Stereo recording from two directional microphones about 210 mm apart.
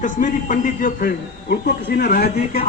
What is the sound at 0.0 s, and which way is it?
A man's voice, 40° left (ahead or behind).